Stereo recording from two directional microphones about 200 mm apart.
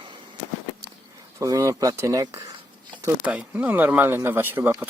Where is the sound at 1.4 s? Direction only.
15° right (ahead or behind).